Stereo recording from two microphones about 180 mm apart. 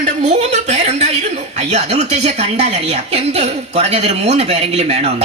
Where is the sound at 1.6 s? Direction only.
40° right (ahead or behind).